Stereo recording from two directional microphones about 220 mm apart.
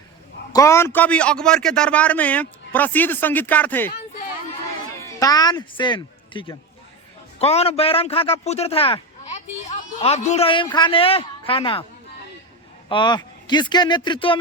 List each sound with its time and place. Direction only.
0.5 s a man's voice: 15° left (ahead or behind)
5.2 s a man's voice: 15° left (ahead or behind)
12.9 s speech: 20° left (ahead or behind)